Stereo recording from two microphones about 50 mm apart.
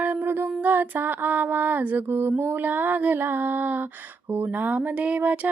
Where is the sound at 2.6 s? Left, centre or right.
Right.